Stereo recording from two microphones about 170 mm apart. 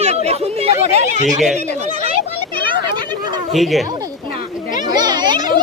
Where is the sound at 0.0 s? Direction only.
40° right (ahead or behind).